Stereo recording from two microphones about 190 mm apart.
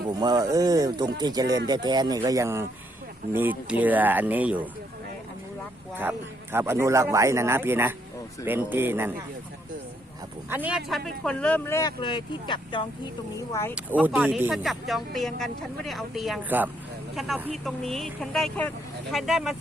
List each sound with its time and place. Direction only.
0.1 s a man's voice: 20° right (ahead or behind)
5.9 s a man's voice: 10° right (ahead or behind)
10.5 s speech: 5° right (ahead or behind); by 11.9 s 15° left (ahead or behind)
11.9 s speech: 25° left (ahead or behind)
13.5 s speech: 15° left (ahead or behind)
14.0 s speech: 5° right (ahead or behind)